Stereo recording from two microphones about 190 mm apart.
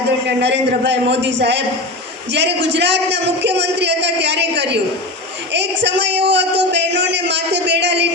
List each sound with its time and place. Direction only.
0.4 s a man's voice: 65° right (ahead or behind)